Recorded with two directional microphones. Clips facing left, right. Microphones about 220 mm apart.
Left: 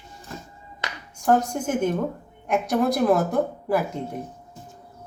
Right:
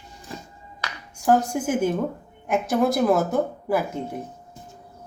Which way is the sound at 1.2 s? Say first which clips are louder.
Right 1 dB; 5° right (ahead or behind).